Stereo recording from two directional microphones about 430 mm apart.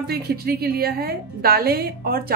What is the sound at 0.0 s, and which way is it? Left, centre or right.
A woman's voice, right.